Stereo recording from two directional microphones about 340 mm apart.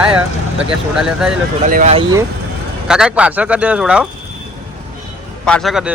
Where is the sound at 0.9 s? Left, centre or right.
Centre.